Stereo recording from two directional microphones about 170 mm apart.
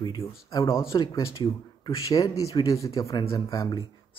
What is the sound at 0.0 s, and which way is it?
Speech, 25° left (ahead or behind).